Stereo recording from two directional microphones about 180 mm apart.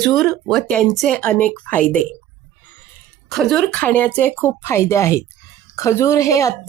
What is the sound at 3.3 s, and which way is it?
Speech, centre (ahead or behind).